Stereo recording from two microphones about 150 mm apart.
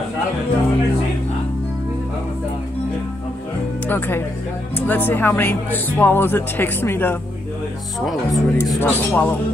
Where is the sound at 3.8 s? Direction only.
15° left (ahead or behind).